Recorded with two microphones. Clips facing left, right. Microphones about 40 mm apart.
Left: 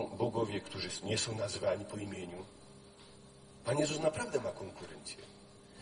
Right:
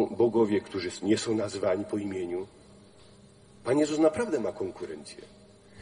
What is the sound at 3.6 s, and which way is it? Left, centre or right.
A man's voice, right.